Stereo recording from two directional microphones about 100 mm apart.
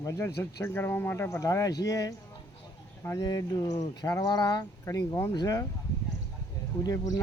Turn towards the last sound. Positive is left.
turn(degrees=40)  # may be behind; listen again after turning